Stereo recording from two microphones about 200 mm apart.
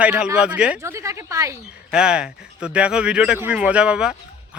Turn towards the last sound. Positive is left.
turn(degrees=-5)  # may be behind; listen again after turning